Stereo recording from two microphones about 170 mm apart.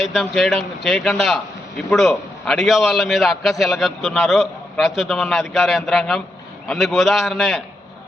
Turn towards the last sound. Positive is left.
turn(degrees=0)  # may be behind; listen again after turning